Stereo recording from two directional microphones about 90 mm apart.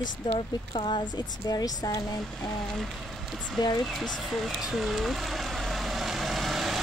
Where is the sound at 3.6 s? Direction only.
45° left (ahead or behind).